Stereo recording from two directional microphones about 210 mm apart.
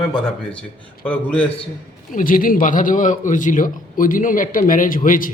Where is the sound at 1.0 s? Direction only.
5° left (ahead or behind).